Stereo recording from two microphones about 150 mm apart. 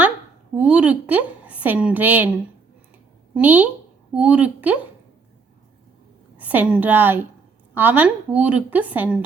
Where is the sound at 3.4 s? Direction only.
10° right (ahead or behind).